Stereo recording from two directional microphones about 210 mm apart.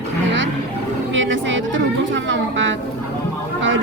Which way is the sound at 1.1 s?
65° right (ahead or behind).